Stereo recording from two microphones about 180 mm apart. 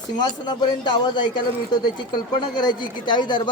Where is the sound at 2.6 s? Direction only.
25° left (ahead or behind).